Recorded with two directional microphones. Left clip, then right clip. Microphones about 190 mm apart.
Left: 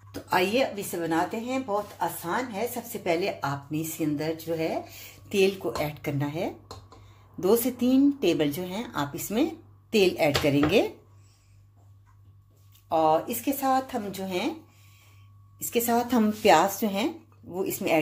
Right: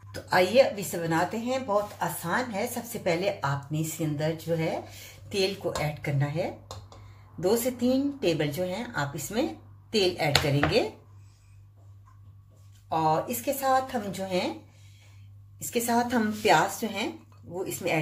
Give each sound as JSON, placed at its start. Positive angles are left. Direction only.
{"t": 0.1, "sound": "a woman's voice", "side_deg": 25}
{"t": 12.8, "sound": "a woman's voice", "side_deg": 35}
{"t": 15.6, "sound": "a woman's voice", "side_deg": 30}